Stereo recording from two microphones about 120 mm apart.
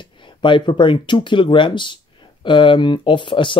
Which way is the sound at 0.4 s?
40° left (ahead or behind).